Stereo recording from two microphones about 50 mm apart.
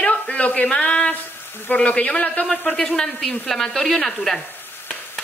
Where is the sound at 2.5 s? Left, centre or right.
Centre.